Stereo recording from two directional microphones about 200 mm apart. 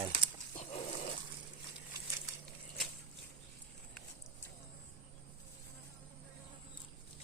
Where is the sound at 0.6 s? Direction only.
35° left (ahead or behind).